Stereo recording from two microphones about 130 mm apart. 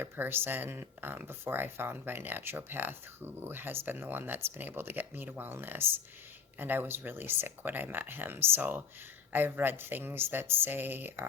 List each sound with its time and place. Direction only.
0.0 s speech: 15° right (ahead or behind)